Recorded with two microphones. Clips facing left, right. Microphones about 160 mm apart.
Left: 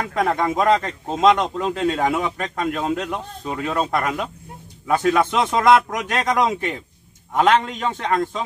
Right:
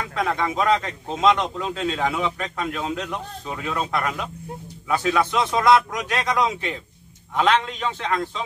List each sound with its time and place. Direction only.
0.3 s a man's voice: 45° left (ahead or behind)
3.4 s speech: 35° left (ahead or behind)
3.9 s a man's voice: 45° left (ahead or behind)